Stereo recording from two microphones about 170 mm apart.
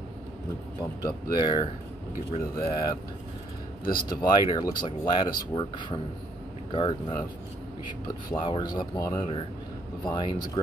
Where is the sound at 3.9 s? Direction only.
55° left (ahead or behind).